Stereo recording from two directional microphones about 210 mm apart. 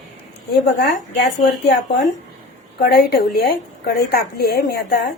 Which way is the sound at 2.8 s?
50° left (ahead or behind).